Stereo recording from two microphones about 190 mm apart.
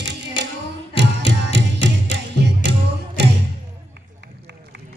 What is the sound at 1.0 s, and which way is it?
Music, 65° right (ahead or behind).